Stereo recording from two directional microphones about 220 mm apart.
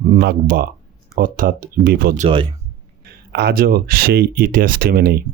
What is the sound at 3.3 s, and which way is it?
Speech, 45° right (ahead or behind).